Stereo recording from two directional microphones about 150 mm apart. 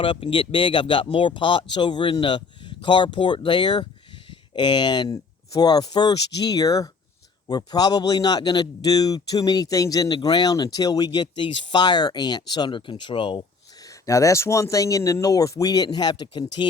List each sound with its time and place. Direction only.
0.0 s a man's voice: 35° left (ahead or behind)
13.8 s a man's voice: 20° left (ahead or behind)